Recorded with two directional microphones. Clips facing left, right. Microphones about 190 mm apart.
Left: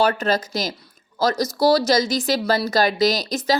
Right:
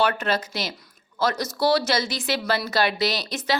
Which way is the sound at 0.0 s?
35° left (ahead or behind).